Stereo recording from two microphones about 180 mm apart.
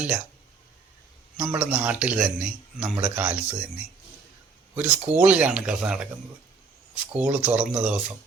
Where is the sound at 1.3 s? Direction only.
10° right (ahead or behind).